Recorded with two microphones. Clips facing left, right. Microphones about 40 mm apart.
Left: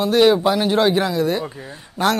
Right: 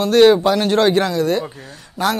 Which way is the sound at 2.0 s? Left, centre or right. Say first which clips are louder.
Left 1 dB; left.